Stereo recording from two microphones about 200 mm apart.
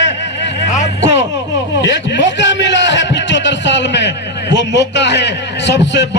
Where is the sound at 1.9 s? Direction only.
60° left (ahead or behind).